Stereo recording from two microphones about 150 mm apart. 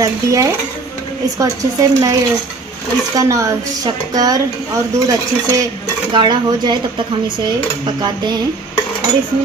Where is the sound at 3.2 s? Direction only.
20° right (ahead or behind).